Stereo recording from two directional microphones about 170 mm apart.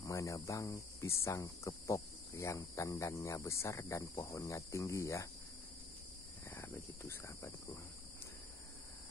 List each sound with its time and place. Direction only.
0.0 s speech: 20° left (ahead or behind)
6.5 s speech: 10° left (ahead or behind)